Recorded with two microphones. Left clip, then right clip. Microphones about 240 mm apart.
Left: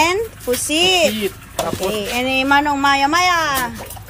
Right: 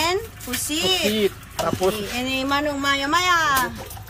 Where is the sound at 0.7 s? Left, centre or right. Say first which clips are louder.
Left 6 dB; right.